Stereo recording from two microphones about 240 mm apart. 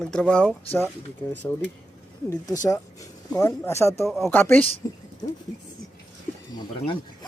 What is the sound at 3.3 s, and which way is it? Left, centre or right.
Speech, centre.